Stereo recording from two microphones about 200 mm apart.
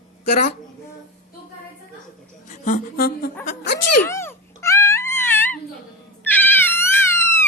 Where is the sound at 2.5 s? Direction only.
45° left (ahead or behind).